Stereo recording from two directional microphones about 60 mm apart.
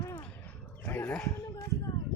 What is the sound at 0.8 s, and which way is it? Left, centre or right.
Dog, left.